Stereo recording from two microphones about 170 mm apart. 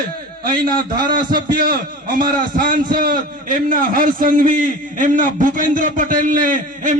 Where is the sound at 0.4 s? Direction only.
55° right (ahead or behind).